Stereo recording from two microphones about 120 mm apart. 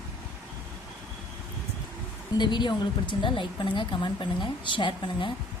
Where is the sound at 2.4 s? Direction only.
40° left (ahead or behind).